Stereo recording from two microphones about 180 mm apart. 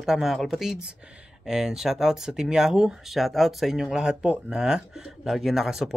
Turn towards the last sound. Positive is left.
turn(degrees=0)  # may be behind; listen again after turning